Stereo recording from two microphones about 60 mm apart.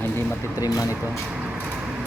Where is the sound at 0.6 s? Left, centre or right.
Left.